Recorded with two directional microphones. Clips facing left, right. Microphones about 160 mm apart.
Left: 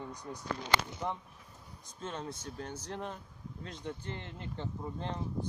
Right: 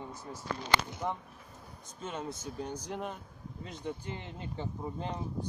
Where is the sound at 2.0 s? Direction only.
5° right (ahead or behind).